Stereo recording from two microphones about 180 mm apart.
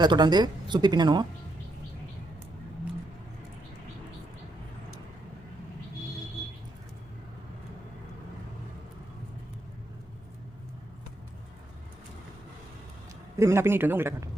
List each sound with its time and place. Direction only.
0.0 s speech: 25° right (ahead or behind)
13.4 s speech: 15° right (ahead or behind)